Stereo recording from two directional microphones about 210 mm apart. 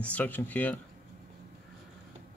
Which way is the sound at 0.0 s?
5° left (ahead or behind).